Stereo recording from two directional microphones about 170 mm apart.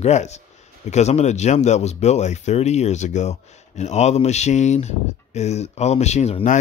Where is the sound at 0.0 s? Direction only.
40° left (ahead or behind).